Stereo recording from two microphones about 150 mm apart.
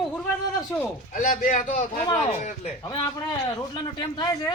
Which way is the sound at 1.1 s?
60° left (ahead or behind).